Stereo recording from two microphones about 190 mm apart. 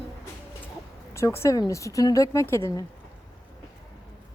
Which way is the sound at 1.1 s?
15° left (ahead or behind).